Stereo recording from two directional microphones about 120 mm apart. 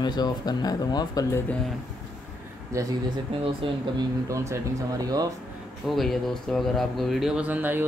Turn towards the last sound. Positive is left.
turn(degrees=-15)  # may be behind; listen again after turning